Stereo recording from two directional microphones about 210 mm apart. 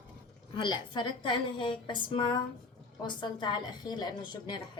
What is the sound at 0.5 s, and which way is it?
A woman's voice, 20° left (ahead or behind).